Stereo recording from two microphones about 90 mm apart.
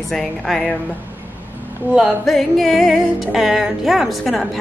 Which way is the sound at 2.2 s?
Centre (ahead or behind).